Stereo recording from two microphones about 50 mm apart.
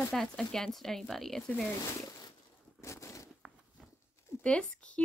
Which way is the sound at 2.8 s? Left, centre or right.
Left.